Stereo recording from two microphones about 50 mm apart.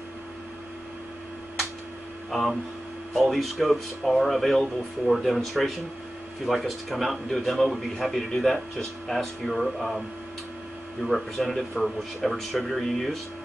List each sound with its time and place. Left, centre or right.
2.3 s a man's voice: centre